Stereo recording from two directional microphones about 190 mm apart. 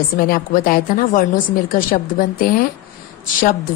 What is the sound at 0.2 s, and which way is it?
A woman's voice, 50° left (ahead or behind).